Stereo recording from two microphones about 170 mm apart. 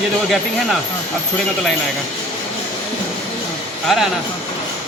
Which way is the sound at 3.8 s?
Centre (ahead or behind).